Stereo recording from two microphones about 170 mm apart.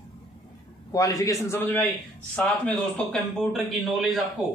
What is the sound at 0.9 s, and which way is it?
A man's voice, 20° left (ahead or behind).